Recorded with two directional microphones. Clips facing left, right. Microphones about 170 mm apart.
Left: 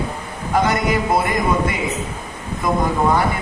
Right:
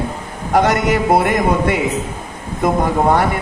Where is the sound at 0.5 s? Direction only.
70° right (ahead or behind).